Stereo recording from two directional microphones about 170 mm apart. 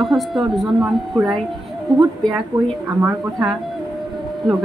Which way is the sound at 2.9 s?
10° right (ahead or behind).